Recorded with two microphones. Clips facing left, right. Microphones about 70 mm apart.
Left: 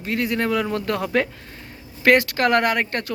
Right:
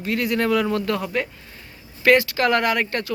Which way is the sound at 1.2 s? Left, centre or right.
Left.